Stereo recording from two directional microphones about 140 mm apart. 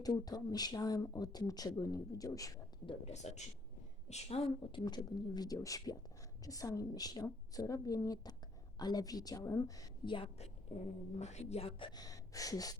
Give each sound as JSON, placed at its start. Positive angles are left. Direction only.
{"t": 0.0, "sound": "speech", "side_deg": 25}
{"t": 2.8, "sound": "speech", "side_deg": 45}
{"t": 11.2, "sound": "speech", "side_deg": 55}
{"t": 11.9, "sound": "gasp", "side_deg": 25}